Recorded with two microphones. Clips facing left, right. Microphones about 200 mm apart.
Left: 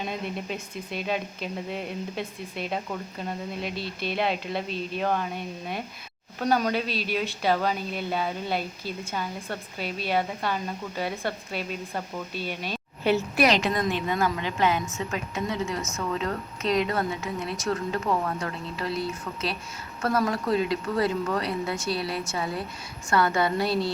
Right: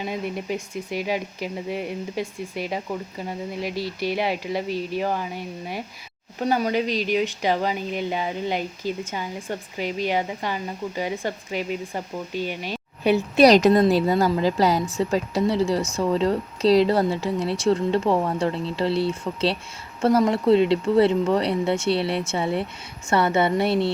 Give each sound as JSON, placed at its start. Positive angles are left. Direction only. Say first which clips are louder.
{"t": 0.9, "sound": "speech", "louder": "right 3 dB", "side_deg": -10}
{"t": 13.4, "sound": "a woman's voice", "louder": "right 11 dB", "side_deg": -40}